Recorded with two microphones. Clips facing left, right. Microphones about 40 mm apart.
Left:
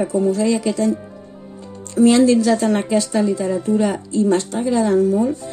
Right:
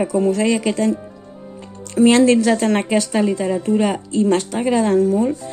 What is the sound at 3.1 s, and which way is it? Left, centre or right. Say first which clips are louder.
Speech: even; right.